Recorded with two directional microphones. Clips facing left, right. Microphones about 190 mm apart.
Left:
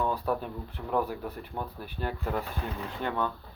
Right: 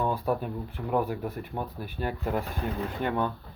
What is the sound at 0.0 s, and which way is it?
Speech, 10° right (ahead or behind).